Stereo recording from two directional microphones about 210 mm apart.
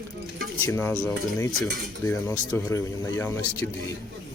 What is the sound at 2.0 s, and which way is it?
Speech, 15° left (ahead or behind).